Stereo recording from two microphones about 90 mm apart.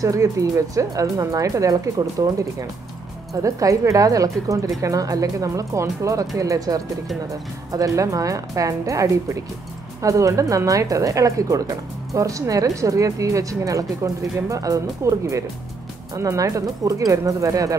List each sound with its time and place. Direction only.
0.0 s speech: 40° right (ahead or behind)
3.4 s speech: 35° right (ahead or behind)